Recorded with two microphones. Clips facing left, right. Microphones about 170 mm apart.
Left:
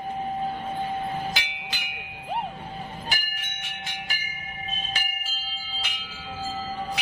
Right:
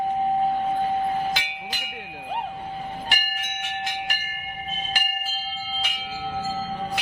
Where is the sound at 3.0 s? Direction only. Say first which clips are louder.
Right 4 dB; 80° right.